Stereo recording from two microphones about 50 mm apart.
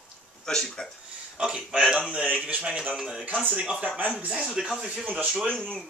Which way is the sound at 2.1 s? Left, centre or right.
Right.